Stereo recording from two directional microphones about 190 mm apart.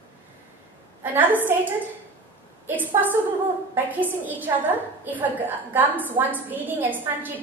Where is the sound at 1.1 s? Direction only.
10° right (ahead or behind).